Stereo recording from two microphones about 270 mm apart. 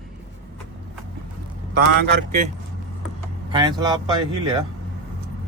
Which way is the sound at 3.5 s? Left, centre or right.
Centre.